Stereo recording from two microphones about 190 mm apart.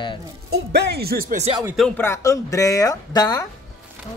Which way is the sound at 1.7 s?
5° left (ahead or behind).